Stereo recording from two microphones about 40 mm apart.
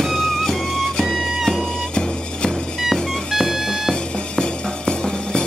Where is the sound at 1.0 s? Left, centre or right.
Centre.